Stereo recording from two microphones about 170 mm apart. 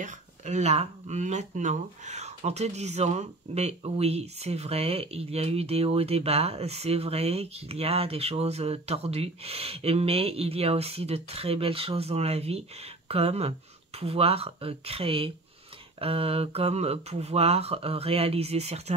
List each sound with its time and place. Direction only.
0.0 s speech: 45° right (ahead or behind)